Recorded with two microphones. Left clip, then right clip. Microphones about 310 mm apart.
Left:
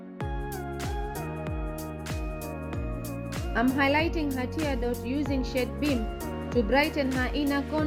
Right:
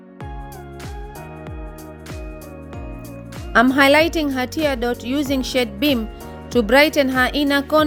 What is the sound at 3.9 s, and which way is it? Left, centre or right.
Speech, right.